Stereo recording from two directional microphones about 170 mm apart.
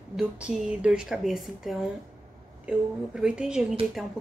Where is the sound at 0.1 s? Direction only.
5° right (ahead or behind).